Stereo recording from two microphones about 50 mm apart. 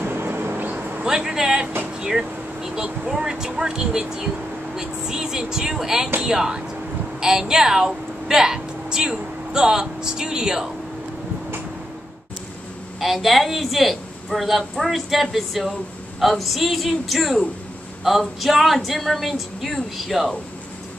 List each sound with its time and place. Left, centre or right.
0.0 s vehicle: right
1.0 s a woman's voice: centre
13.0 s a woman's voice: centre